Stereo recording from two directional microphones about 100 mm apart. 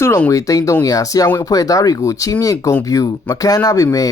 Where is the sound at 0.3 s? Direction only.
35° left (ahead or behind).